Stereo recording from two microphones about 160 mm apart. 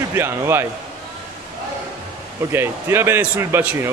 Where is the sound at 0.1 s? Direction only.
15° right (ahead or behind).